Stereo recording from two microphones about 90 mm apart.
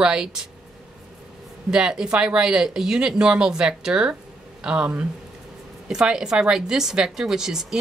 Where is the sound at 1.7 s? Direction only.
10° right (ahead or behind).